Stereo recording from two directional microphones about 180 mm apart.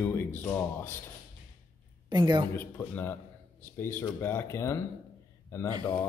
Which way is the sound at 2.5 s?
10° left (ahead or behind).